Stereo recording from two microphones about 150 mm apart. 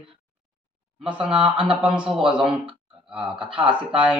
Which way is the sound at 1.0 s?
5° right (ahead or behind).